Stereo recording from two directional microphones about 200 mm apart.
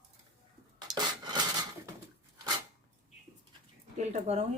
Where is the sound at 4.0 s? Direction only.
35° right (ahead or behind).